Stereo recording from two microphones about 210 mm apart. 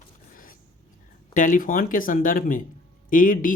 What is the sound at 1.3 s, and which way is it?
Speech, 40° left (ahead or behind).